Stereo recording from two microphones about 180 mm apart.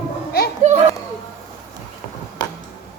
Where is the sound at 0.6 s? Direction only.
40° right (ahead or behind).